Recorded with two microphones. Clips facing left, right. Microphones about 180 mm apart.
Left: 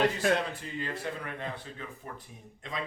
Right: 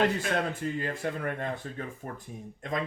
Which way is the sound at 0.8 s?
50° right (ahead or behind).